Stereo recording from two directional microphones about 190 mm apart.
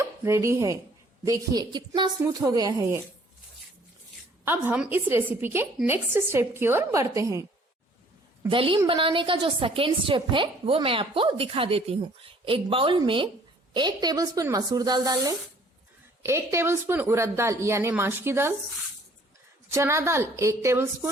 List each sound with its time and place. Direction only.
0.0 s a woman's voice: 15° right (ahead or behind)
4.4 s a woman's voice: 10° right (ahead or behind)
8.4 s a woman's voice: 25° right (ahead or behind)
19.7 s a woman's voice: 15° right (ahead or behind)